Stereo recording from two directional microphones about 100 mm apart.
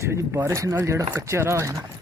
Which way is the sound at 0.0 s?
25° right (ahead or behind).